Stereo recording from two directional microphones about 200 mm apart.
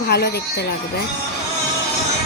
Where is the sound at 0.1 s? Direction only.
55° left (ahead or behind).